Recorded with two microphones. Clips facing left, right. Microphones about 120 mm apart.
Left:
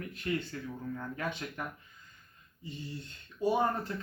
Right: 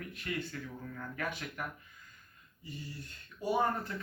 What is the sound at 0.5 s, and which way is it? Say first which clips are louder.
Speech: left 4 dB; 30° left (ahead or behind).